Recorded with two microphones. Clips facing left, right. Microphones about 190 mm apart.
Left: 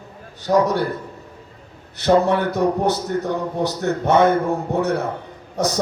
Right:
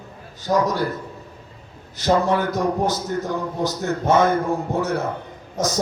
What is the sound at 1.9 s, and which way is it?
A man's voice, 65° left (ahead or behind).